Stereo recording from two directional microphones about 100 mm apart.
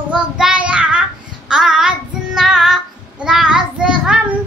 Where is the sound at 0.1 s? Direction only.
10° right (ahead or behind).